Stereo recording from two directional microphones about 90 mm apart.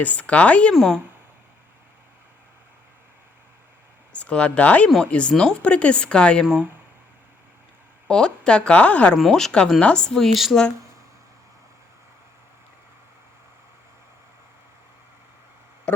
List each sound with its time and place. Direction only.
0.0 s speech: 15° left (ahead or behind)
0.7 s speech: centre (ahead or behind)
4.1 s speech: 15° left (ahead or behind)
6.4 s speech: 5° right (ahead or behind)
8.0 s speech: 10° left (ahead or behind)
9.1 s speech: 5° left (ahead or behind)